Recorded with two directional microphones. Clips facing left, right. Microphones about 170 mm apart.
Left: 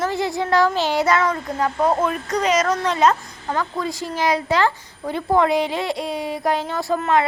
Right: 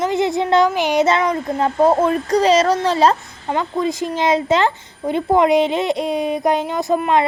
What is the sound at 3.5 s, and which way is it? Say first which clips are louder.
Speech: right 4 dB; 20° right (ahead or behind).